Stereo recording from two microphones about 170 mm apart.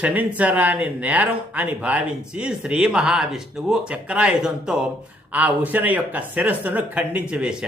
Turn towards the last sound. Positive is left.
turn(degrees=-5)  # may be behind; listen again after turning